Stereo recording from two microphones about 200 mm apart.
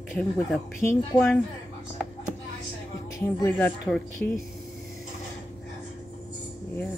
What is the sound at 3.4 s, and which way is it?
Speech, 10° left (ahead or behind).